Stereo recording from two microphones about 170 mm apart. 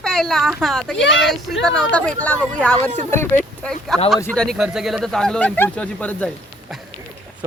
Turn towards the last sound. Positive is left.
turn(degrees=10)  # may be behind; listen again after turning